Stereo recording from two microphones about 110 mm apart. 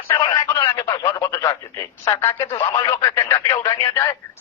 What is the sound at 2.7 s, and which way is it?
Speech, 45° left (ahead or behind).